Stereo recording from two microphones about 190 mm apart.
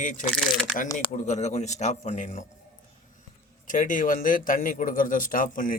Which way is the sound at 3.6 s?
45° left (ahead or behind).